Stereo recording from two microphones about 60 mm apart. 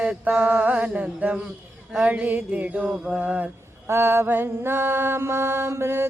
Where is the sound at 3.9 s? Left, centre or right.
Right.